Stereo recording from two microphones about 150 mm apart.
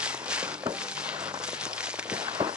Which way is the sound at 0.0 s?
5° right (ahead or behind).